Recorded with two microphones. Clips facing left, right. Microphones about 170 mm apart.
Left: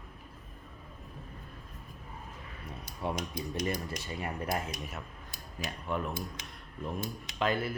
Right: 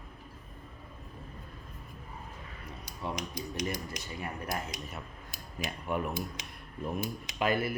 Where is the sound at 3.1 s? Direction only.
55° left (ahead or behind).